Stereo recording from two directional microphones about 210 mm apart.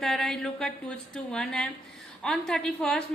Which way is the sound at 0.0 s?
Centre (ahead or behind).